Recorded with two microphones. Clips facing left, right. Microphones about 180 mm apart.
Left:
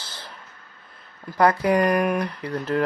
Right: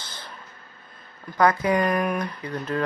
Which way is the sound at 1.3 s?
30° left (ahead or behind).